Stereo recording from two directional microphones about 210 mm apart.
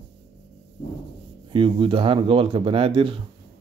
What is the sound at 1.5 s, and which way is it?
Speech, 25° right (ahead or behind).